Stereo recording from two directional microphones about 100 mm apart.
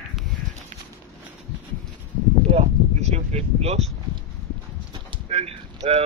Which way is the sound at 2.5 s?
90° right.